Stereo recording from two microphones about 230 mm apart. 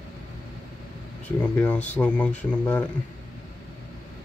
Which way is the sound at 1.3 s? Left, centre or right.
Centre.